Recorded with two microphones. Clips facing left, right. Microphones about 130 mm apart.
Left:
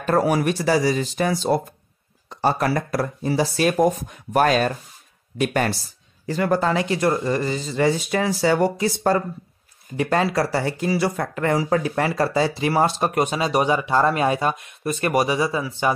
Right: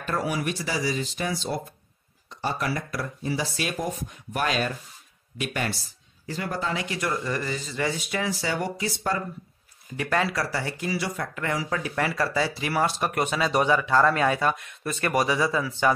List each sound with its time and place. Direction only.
0.0 s speech: 45° left (ahead or behind)
6.2 s speech: 60° left (ahead or behind)
6.7 s speech: 35° left (ahead or behind)
9.9 s speech: 30° left (ahead or behind)